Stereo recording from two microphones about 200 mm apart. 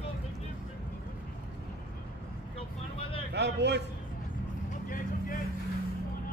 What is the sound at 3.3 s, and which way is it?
Speech, 60° right (ahead or behind).